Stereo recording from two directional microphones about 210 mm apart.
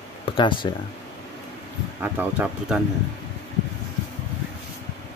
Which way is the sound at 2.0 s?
10° right (ahead or behind).